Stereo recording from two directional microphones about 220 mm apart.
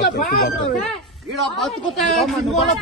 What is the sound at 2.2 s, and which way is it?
Speech, centre (ahead or behind).